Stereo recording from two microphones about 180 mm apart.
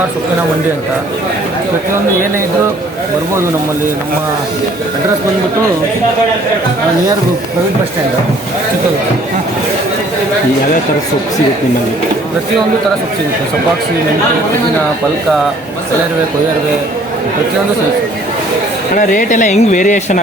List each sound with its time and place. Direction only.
18.9 s speech: 45° left (ahead or behind)